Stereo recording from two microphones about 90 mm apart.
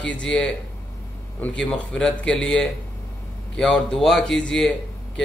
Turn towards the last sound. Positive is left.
turn(degrees=5)  # may be behind; listen again after turning